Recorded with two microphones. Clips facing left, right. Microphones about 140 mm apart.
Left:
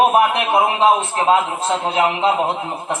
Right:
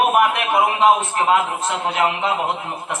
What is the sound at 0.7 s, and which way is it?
A man's voice, 30° left (ahead or behind).